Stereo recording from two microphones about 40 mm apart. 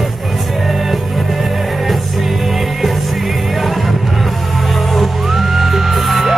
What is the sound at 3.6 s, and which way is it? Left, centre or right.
Music, centre.